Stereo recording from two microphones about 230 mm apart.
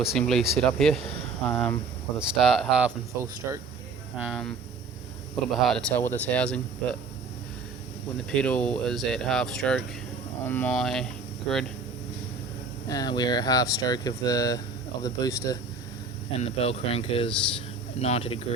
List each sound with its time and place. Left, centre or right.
0.0 s speech: centre
4.2 s speech: centre
5.6 s speech: centre
8.3 s speech: centre
12.9 s speech: centre
16.4 s speech: left